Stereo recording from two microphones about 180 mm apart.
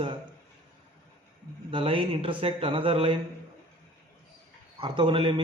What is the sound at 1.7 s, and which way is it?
A man's voice, 30° right (ahead or behind).